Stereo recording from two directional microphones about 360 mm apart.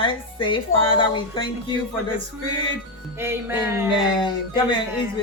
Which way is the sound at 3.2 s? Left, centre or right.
Centre.